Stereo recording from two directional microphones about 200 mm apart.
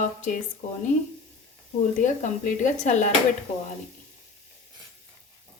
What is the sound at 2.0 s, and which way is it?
Speech, 40° left (ahead or behind).